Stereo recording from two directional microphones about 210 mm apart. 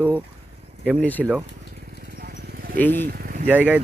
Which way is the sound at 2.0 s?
50° right (ahead or behind).